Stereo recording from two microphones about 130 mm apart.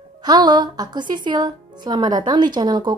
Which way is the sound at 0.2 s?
35° right (ahead or behind).